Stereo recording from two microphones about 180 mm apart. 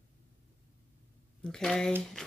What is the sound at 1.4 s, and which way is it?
Speech, 5° left (ahead or behind).